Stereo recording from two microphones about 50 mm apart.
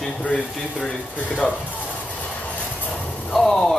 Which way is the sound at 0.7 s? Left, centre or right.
Centre.